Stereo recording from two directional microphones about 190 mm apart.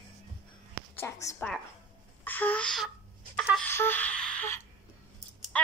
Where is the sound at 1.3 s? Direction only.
5° left (ahead or behind).